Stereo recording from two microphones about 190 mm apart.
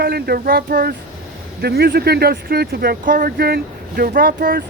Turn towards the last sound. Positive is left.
turn(degrees=-50)  # may be behind; listen again after turning